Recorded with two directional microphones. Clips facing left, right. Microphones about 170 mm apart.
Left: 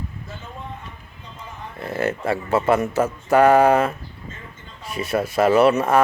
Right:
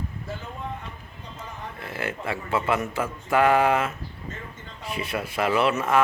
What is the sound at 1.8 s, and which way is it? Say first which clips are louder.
Speech: left 8 dB; 40° left (ahead or behind).